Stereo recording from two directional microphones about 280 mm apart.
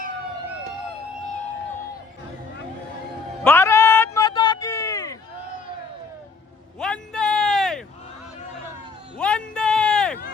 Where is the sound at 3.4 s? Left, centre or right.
Centre.